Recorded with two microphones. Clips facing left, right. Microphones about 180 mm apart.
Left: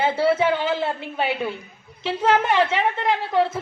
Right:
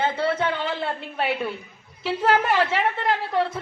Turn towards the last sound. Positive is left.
turn(degrees=0)  # may be behind; listen again after turning